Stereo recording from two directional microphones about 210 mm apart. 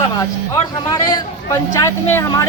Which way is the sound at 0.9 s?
20° left (ahead or behind).